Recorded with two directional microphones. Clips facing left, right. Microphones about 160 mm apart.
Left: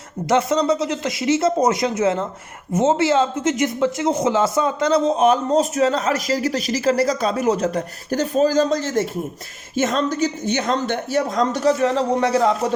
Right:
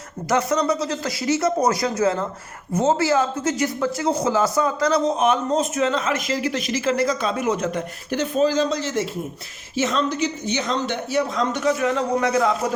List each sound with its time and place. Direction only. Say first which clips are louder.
0.3 s speech: left 3 dB; 25° left (ahead or behind)